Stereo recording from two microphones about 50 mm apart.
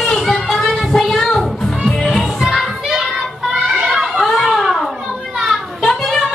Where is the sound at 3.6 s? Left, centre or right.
Centre.